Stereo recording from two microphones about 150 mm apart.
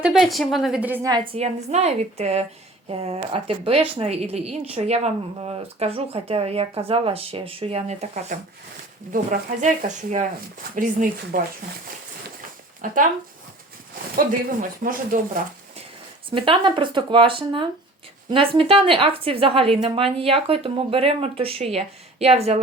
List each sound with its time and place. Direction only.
0.0 s a woman's voice: centre (ahead or behind)
1.1 s a woman's voice: 35° right (ahead or behind)
8.3 s speech: 60° right (ahead or behind)
10.8 s speech: 70° right (ahead or behind)
12.8 s speech: 60° right (ahead or behind)
14.8 s speech: 55° right (ahead or behind)
16.3 s speech: 35° right (ahead or behind)